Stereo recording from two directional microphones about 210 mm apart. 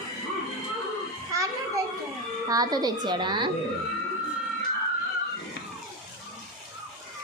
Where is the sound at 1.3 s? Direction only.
15° right (ahead or behind).